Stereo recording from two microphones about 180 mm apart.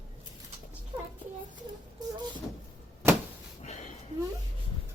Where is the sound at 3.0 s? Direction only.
15° right (ahead or behind).